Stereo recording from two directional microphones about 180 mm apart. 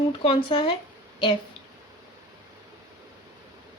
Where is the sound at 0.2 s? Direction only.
30° left (ahead or behind).